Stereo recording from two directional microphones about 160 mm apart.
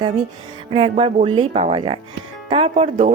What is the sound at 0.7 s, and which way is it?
Speech, 35° right (ahead or behind).